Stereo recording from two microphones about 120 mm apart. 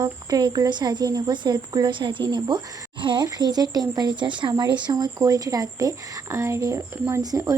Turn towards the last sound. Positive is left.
turn(degrees=-30)  # may be behind; listen again after turning